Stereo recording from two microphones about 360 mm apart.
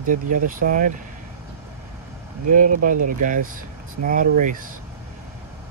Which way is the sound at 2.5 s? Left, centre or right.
Right.